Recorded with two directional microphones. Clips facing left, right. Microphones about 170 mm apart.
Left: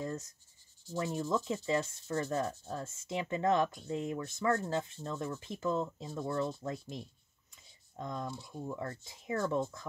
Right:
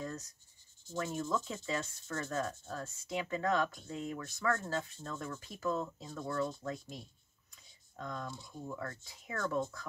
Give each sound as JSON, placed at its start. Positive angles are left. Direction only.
{"t": 1.3, "sound": "speech", "side_deg": 25}